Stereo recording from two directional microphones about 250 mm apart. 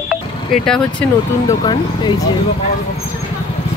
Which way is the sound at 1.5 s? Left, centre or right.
Centre.